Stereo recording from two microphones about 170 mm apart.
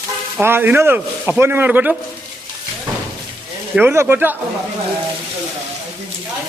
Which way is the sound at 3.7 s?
15° right (ahead or behind).